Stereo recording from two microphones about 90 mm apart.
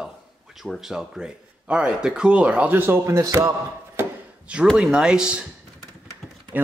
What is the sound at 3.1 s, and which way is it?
Speech, 40° right (ahead or behind).